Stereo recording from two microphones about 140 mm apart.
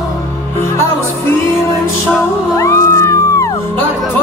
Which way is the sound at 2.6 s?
20° left (ahead or behind).